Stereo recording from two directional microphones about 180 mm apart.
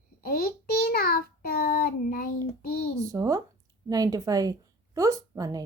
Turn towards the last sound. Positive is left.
turn(degrees=-20)  # may be behind; listen again after turning